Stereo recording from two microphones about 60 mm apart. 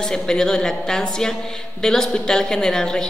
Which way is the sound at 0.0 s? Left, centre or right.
Centre.